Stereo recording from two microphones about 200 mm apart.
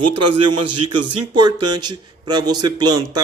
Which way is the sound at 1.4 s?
20° right (ahead or behind).